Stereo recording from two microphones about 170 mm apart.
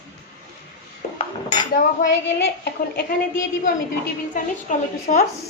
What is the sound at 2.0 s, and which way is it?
Speech, 50° left (ahead or behind).